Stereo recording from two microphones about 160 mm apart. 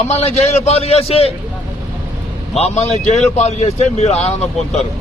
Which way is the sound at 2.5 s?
40° left (ahead or behind).